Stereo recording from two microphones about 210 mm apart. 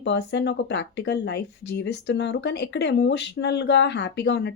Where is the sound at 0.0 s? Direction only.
55° left (ahead or behind).